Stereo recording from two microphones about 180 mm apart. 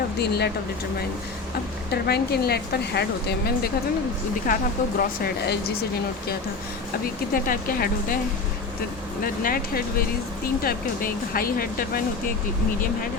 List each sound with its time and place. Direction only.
0.2 s speech: 65° left (ahead or behind)
1.9 s speech: 65° left (ahead or behind)
4.5 s speech: 45° left (ahead or behind)
4.9 s speech: 55° left (ahead or behind)
7.3 s speech: 50° left (ahead or behind)
9.2 s speech: 55° left (ahead or behind)